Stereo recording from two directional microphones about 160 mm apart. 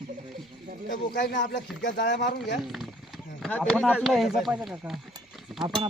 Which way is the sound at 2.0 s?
90° left.